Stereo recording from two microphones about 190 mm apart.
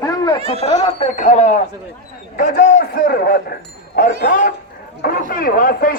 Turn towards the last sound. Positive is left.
turn(degrees=50)  # may be behind; listen again after turning